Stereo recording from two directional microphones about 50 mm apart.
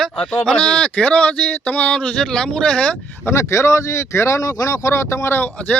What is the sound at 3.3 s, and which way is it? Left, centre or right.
Speech, left.